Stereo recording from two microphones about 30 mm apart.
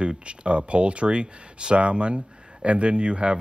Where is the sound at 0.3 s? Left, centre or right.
Right.